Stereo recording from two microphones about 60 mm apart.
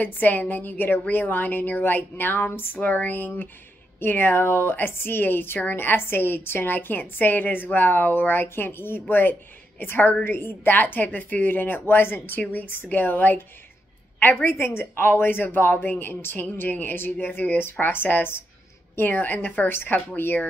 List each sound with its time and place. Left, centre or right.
0.0 s a woman's voice: left
14.4 s a woman's voice: left